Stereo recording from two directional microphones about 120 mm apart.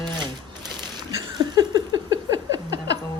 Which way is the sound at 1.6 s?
30° right (ahead or behind).